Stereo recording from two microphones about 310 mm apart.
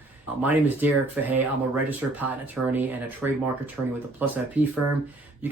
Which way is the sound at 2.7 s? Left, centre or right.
Centre.